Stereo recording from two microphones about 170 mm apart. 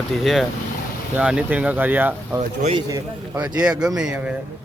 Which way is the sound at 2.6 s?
35° right (ahead or behind).